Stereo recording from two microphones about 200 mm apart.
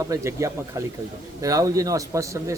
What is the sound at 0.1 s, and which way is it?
A man's voice, 15° right (ahead or behind).